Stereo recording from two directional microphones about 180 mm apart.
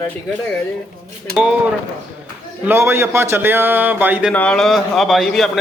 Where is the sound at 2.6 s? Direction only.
10° right (ahead or behind).